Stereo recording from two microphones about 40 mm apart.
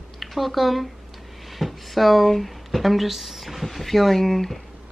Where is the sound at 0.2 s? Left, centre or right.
Centre.